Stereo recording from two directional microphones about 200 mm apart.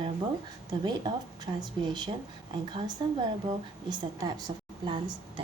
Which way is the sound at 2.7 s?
20° right (ahead or behind).